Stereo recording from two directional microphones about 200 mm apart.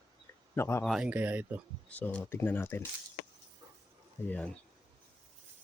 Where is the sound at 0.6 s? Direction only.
15° left (ahead or behind).